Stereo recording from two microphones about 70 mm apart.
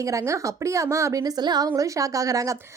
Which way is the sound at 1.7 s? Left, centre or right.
Right.